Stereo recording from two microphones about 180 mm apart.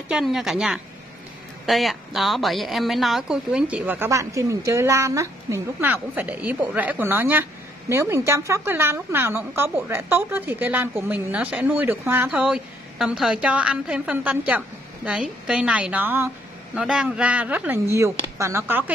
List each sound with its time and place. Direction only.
0.1 s a woman's voice: centre (ahead or behind)